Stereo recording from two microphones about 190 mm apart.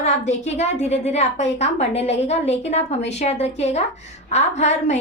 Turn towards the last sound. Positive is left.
turn(degrees=35)  # may be behind; listen again after turning